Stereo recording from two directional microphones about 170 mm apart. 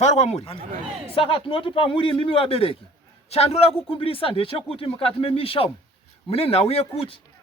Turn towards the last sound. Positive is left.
turn(degrees=35)  # may be behind; listen again after turning